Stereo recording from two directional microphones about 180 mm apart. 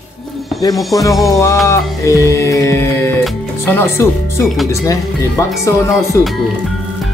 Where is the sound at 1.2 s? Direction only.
15° left (ahead or behind).